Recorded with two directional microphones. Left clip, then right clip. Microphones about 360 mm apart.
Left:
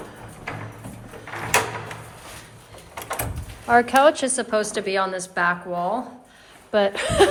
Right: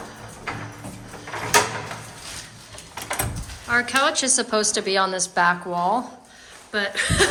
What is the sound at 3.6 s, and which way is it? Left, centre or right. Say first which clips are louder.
A woman's voice: left 5 dB; centre.